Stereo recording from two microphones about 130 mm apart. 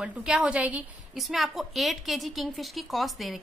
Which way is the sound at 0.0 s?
5° right (ahead or behind).